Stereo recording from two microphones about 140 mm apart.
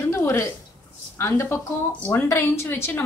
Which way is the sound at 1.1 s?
20° left (ahead or behind).